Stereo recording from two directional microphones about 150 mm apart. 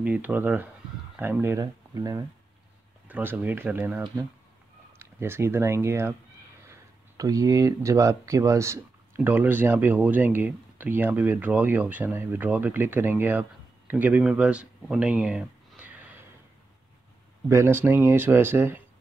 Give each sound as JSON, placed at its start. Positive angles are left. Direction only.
{"t": 0.0, "sound": "speech", "side_deg": -10}
{"t": 3.1, "sound": "speech", "side_deg": -10}
{"t": 17.5, "sound": "speech", "side_deg": -15}